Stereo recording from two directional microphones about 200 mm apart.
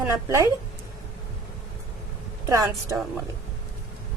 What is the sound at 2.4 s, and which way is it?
Speech, 15° right (ahead or behind).